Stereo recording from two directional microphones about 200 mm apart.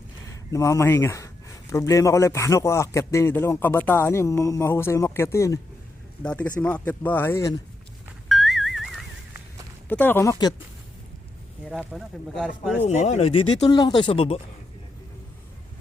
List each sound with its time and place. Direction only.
0.3 s speech: 15° left (ahead or behind)
8.3 s a sound: centre (ahead or behind)
9.9 s speech: 10° left (ahead or behind)
11.7 s speech: 5° right (ahead or behind)
12.8 s speech: 35° left (ahead or behind)